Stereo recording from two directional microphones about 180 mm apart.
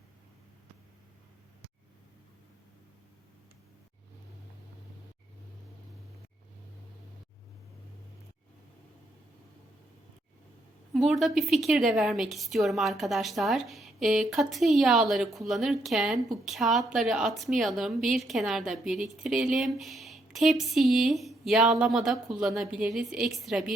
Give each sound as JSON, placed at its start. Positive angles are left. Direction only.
{"t": 10.9, "sound": "a woman's voice", "side_deg": 0}